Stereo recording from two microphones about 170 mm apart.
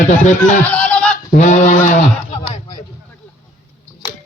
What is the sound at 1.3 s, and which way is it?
Speech, 45° left (ahead or behind).